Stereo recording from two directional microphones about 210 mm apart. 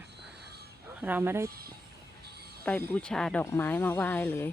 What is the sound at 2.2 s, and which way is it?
Music, 50° right (ahead or behind).